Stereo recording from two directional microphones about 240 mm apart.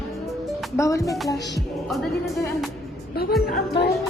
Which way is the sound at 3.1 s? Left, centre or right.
Left.